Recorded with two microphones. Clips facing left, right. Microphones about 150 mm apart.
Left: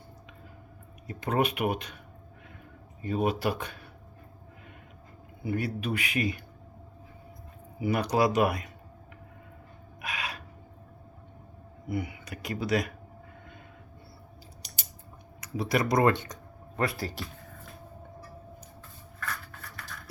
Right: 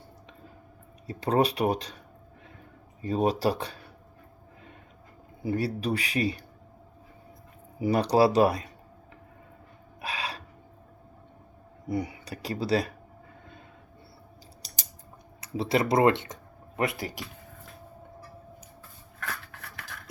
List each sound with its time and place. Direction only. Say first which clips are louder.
1.0 s speech: right 3 dB; 35° right (ahead or behind)
3.0 s speech: right 3 dB; 35° right (ahead or behind)
5.4 s speech: right 3 dB; 35° right (ahead or behind)
7.8 s speech: right 4 dB; 35° right (ahead or behind)
10.0 s a sound: right 2 dB; 30° right (ahead or behind)
11.9 s speech: right 3 dB; 35° right (ahead or behind)
15.4 s speech: right 2 dB; 30° right (ahead or behind)
19.2 s a sound: even; 75° right (ahead or behind)